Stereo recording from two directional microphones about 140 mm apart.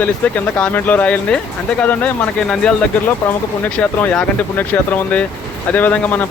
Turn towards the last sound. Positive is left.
turn(degrees=10)  # may be behind; listen again after turning